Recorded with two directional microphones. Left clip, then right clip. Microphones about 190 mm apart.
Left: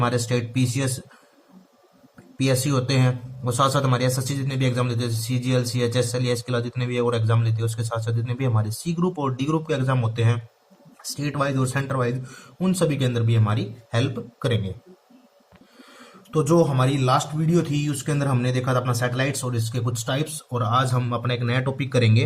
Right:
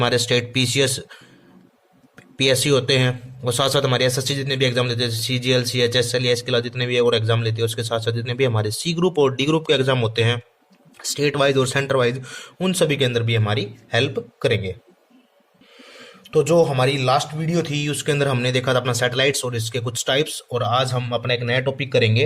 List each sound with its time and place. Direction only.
0.0 s a man's voice: 40° right (ahead or behind)
2.4 s a man's voice: 40° right (ahead or behind); by 12.1 s 55° right (ahead or behind)
12.5 s a man's voice: 40° right (ahead or behind)
16.0 s a man's voice: 25° right (ahead or behind)
18.0 s a man's voice: 50° right (ahead or behind); by 22.2 s 15° right (ahead or behind)